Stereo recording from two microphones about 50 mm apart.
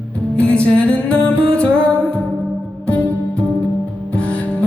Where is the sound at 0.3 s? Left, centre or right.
Left.